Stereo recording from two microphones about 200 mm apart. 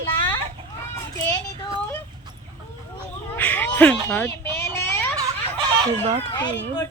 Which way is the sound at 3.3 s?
10° left (ahead or behind).